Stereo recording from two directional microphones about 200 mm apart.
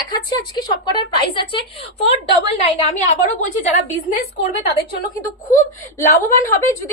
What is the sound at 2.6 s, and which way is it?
A woman's voice, 35° left (ahead or behind).